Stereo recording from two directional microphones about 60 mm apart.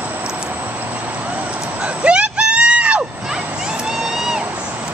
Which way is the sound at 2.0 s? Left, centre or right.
Centre.